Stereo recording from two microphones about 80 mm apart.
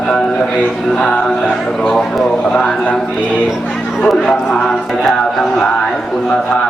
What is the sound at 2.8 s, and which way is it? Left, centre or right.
Mantra, centre.